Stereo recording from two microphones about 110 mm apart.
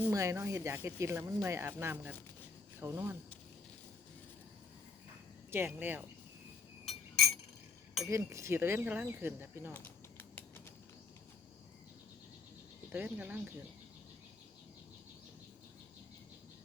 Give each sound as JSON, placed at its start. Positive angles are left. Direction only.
{"t": 0.1, "sound": "speech", "side_deg": -30}
{"t": 5.5, "sound": "speech", "side_deg": -20}
{"t": 6.8, "sound": "a sound", "side_deg": 0}
{"t": 8.0, "sound": "speech", "side_deg": -25}
{"t": 9.7, "sound": "a sound", "side_deg": 15}
{"t": 12.9, "sound": "speech", "side_deg": -10}